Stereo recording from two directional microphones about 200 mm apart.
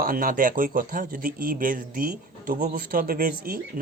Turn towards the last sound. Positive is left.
turn(degrees=-45)  # may be behind; listen again after turning